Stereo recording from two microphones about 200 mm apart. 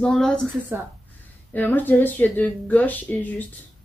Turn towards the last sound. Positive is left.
turn(degrees=10)  # may be behind; listen again after turning